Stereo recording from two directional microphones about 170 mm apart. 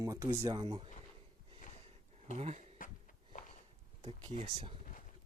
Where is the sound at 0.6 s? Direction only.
30° right (ahead or behind).